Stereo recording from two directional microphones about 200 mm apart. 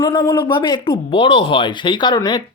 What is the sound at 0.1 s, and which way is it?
Speech, 25° left (ahead or behind).